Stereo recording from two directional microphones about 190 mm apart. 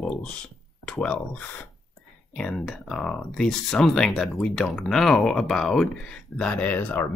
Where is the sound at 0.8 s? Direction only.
5° left (ahead or behind).